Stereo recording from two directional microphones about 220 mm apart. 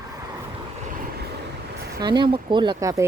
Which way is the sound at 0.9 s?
40° right (ahead or behind).